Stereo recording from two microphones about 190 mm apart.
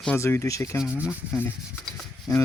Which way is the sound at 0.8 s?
5° right (ahead or behind).